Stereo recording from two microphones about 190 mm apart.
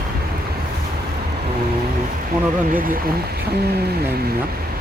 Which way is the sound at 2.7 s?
50° right (ahead or behind).